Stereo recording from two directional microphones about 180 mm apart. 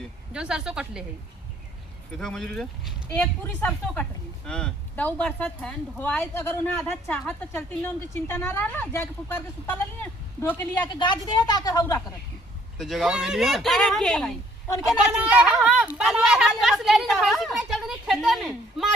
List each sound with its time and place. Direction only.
0.3 s a woman's voice: 5° right (ahead or behind)
2.1 s a woman's voice: 5° left (ahead or behind)
10.9 s a woman's voice: 25° left (ahead or behind)
12.7 s a woman's voice: centre (ahead or behind)